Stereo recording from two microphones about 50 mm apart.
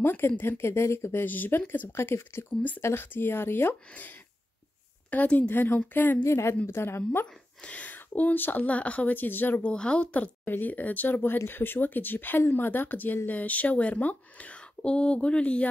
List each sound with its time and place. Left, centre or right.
0.0 s speech: left
1.2 s speech: left
1.7 s speech: left
3.9 s speech: left
5.5 s speech: left
6.2 s a woman's voice: left
6.6 s speech: left
7.0 s speech: left
9.7 s speech: left
10.4 s speech: left